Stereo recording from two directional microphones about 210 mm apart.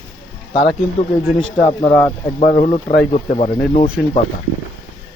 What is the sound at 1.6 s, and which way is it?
Speech, 20° left (ahead or behind).